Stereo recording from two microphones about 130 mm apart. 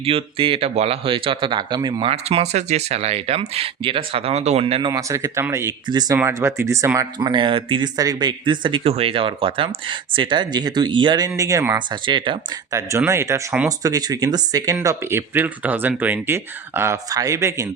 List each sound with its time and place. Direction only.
0.0 s speech: 45° right (ahead or behind)
2.1 s speech: 55° right (ahead or behind)
4.9 s speech: 25° right (ahead or behind)
5.9 s speech: 30° right (ahead or behind)
6.1 s speech: 20° right (ahead or behind)
7.2 s speech: 35° right (ahead or behind)
7.9 s speech: 30° right (ahead or behind)
11.9 s speech: 40° right (ahead or behind)
12.7 s speech: 25° right (ahead or behind)